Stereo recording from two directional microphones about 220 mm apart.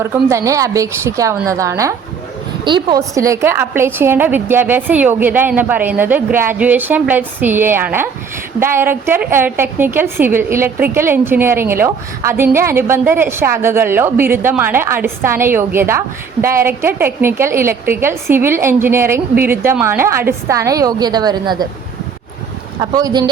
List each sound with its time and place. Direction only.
0.0 s a woman's voice: 10° right (ahead or behind)
22.8 s speech: 15° right (ahead or behind)